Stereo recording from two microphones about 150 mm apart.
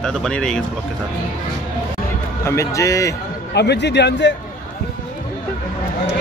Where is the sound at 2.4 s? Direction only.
20° left (ahead or behind).